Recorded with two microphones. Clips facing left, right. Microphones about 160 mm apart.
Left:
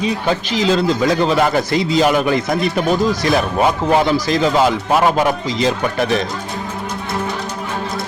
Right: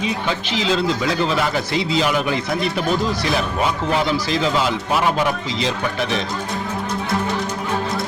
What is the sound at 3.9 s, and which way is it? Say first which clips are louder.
Speech: left 5 dB; 45° left (ahead or behind).